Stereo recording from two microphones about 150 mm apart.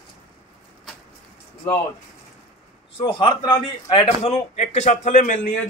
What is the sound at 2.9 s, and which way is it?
A man's voice, 35° left (ahead or behind).